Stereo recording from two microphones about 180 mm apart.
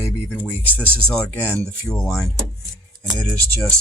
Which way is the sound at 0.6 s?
10° left (ahead or behind).